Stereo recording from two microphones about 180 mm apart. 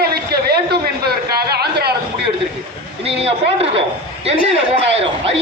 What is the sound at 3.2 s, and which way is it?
Speech, 35° right (ahead or behind).